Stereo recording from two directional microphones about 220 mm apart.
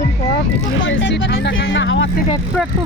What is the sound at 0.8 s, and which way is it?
Speech, 60° left (ahead or behind).